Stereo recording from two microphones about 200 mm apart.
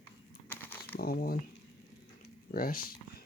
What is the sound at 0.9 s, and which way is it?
Speech, 50° left (ahead or behind).